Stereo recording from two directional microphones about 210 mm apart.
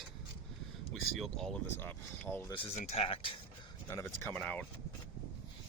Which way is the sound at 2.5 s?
25° left (ahead or behind).